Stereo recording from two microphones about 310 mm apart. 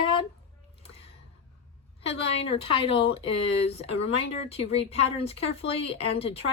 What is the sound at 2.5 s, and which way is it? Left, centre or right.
Speech, centre.